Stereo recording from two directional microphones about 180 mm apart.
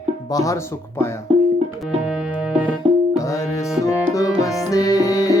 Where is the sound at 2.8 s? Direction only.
35° right (ahead or behind).